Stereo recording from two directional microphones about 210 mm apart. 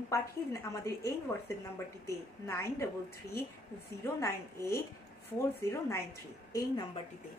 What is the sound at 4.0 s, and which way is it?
A woman's voice, 10° left (ahead or behind).